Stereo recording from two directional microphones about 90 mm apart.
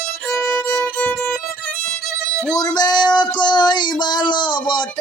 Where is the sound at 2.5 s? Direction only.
50° left (ahead or behind).